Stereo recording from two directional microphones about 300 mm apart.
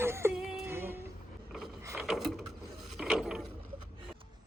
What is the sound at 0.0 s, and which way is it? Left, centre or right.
Music, centre.